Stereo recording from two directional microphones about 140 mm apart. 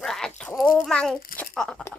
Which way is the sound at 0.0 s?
5° left (ahead or behind).